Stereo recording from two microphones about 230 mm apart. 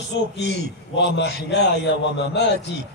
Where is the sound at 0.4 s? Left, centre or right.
Left.